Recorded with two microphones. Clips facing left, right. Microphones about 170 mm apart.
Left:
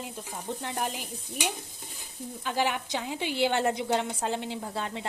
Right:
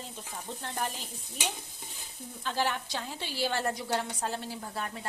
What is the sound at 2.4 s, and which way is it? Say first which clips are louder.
A woman's voice: left 2 dB; 15° left (ahead or behind).